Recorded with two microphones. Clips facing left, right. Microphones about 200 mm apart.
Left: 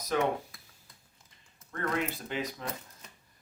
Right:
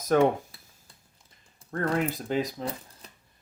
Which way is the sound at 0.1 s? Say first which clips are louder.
Right 8 dB; 50° right (ahead or behind).